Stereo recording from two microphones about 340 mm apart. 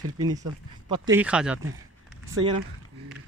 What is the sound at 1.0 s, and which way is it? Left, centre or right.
Speech, centre.